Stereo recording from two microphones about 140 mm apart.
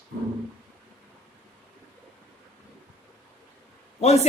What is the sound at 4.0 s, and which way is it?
Speech, 50° left (ahead or behind).